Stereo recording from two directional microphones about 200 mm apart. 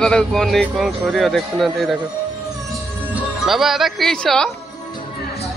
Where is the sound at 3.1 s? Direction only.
Centre (ahead or behind).